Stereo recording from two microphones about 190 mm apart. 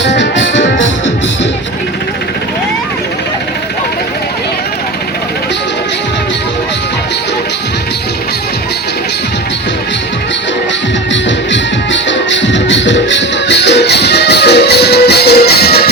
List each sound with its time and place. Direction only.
0.0 s music: 70° left (ahead or behind)
11.1 s music: 70° left (ahead or behind)